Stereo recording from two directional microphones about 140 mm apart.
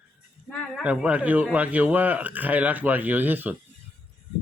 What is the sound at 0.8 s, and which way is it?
Speech, 10° right (ahead or behind).